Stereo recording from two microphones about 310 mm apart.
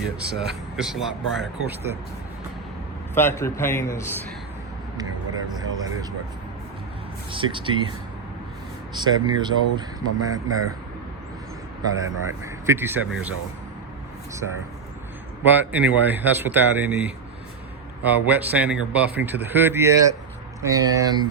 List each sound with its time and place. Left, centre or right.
0.2 s speech: centre
3.2 s a man's voice: centre
5.5 s a man's voice: centre
7.3 s a man's voice: centre
9.0 s a man's voice: centre
11.9 s a man's voice: centre
15.4 s a man's voice: centre